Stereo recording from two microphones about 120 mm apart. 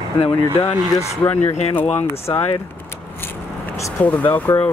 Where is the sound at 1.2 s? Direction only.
15° left (ahead or behind).